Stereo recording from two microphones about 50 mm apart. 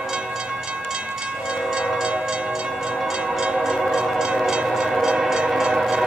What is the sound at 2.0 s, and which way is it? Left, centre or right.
Train, centre.